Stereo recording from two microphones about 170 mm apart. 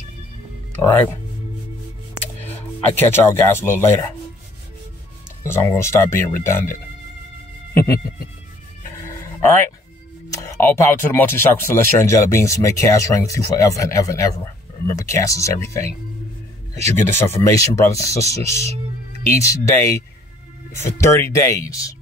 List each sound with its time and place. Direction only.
2.4 s speech: 10° left (ahead or behind)
5.4 s speech: 15° left (ahead or behind)
9.0 s dog: 10° left (ahead or behind)
10.3 s speech: 15° left (ahead or behind)